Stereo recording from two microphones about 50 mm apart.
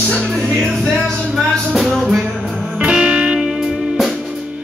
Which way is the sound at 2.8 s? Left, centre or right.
Centre.